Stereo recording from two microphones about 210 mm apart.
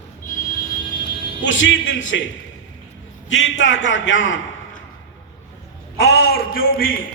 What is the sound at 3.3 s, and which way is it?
A man's voice, 60° left (ahead or behind).